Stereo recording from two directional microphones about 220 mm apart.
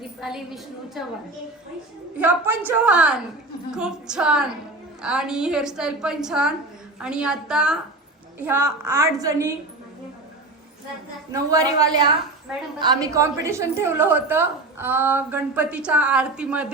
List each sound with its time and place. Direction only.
0.2 s a woman's voice: centre (ahead or behind)
2.1 s a woman's voice: 5° right (ahead or behind)
11.3 s a woman's voice: 15° right (ahead or behind)